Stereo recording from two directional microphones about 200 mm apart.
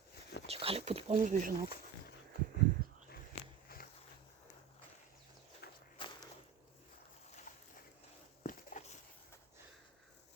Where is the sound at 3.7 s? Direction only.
45° left (ahead or behind).